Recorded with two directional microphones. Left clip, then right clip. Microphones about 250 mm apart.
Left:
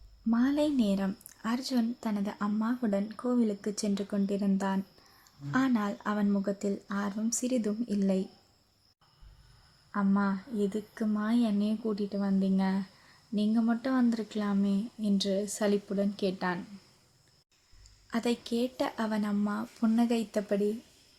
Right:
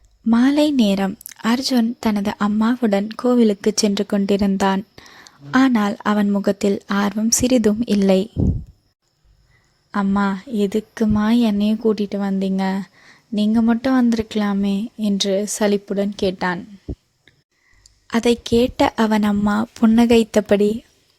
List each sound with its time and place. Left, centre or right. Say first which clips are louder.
0.3 s speech: right 12 dB; right
9.9 s speech: right 10 dB; right
18.1 s speech: right 15 dB; right